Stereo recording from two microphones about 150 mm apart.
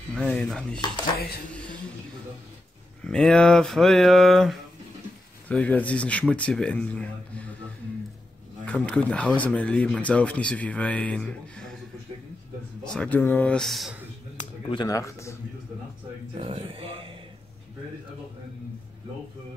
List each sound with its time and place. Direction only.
0.1 s speech: 5° left (ahead or behind)
3.0 s speech: 5° left (ahead or behind)
8.6 s speech: 10° left (ahead or behind)
12.9 s speech: 10° left (ahead or behind)
14.7 s speech: 25° left (ahead or behind)
16.3 s speech: 40° right (ahead or behind)